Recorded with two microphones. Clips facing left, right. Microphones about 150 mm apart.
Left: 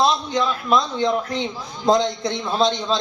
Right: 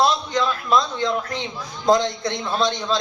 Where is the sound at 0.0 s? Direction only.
25° left (ahead or behind).